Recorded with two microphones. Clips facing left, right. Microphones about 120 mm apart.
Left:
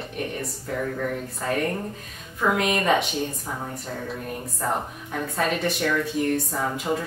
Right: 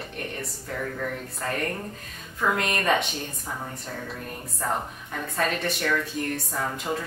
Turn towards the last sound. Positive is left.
turn(degrees=5)  # may be behind; listen again after turning